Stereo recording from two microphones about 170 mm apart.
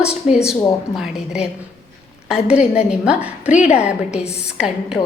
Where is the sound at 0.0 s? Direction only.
5° right (ahead or behind).